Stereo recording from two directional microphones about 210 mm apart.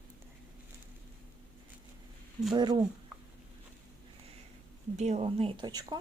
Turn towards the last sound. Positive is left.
turn(degrees=-20)  # may be behind; listen again after turning